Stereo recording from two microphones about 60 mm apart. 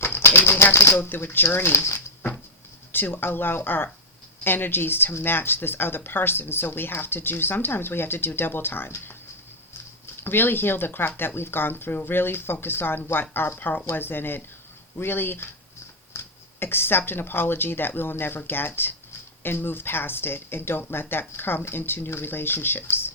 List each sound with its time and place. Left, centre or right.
0.0 s speech: left
10.2 s speech: left
16.1 s a sound: left
17.1 s speech: left